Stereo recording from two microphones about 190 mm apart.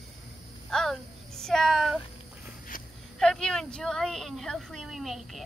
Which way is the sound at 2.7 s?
50° left (ahead or behind).